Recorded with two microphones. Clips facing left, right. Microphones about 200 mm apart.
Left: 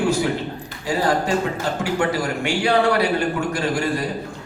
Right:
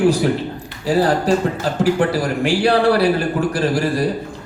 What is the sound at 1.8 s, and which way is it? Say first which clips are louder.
A man's voice: right 6 dB; 35° right (ahead or behind).